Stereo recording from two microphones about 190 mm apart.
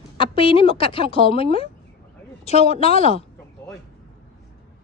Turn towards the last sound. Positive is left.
turn(degrees=30)  # may be behind; listen again after turning